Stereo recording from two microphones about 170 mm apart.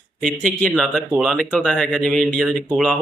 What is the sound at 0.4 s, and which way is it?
A man's voice, 5° left (ahead or behind).